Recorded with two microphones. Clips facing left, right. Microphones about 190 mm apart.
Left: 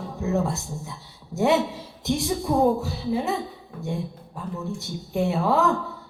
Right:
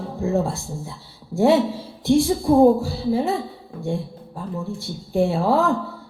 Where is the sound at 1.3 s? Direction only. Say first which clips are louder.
Right 4 dB; 30° right (ahead or behind).